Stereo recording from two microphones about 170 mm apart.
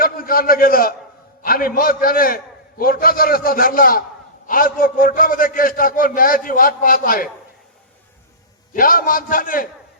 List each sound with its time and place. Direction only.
0.0 s a man's voice: 60° left (ahead or behind)
8.7 s a man's voice: 55° left (ahead or behind)